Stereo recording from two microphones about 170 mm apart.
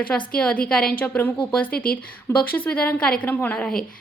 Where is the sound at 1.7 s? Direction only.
60° left (ahead or behind).